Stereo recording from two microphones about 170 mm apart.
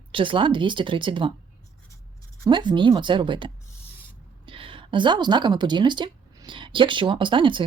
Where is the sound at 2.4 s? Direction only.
25° right (ahead or behind).